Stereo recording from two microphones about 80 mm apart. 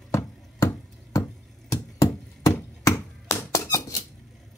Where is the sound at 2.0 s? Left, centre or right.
Left.